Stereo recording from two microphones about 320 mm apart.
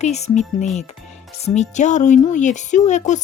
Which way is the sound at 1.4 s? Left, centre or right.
Left.